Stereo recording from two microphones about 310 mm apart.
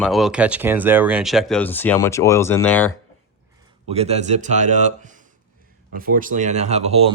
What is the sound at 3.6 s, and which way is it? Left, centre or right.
Speech, centre.